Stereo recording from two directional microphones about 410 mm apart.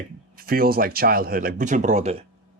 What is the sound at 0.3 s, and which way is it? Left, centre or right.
Speech, right.